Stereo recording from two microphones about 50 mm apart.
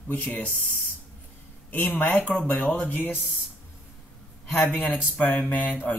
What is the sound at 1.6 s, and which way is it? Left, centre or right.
Speech, left.